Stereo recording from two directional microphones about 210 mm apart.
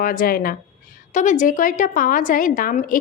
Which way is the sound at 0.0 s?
40° left (ahead or behind).